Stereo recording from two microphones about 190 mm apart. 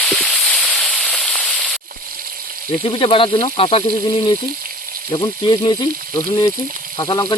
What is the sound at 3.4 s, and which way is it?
Speech, 30° left (ahead or behind).